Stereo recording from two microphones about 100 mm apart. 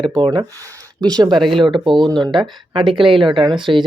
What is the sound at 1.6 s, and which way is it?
Speech, 55° right (ahead or behind).